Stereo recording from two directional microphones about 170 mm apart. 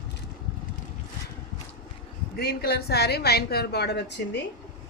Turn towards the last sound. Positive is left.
turn(degrees=85)